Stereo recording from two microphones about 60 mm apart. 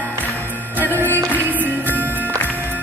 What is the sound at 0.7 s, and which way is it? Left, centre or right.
Music, right.